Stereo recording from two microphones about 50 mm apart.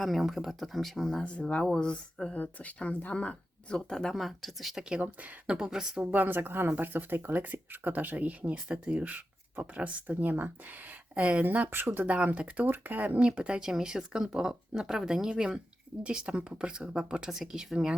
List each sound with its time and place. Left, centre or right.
0.0 s speech: centre
1.2 s speech: left
2.3 s speech: left; by 4.1 s centre
4.1 s speech: centre
5.0 s speech: centre
6.1 s speech: right
11.1 s speech: right
11.7 s speech: right
12.0 s speech: right
13.2 s speech: right